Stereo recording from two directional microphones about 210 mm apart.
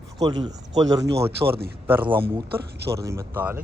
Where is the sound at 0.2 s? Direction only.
20° right (ahead or behind).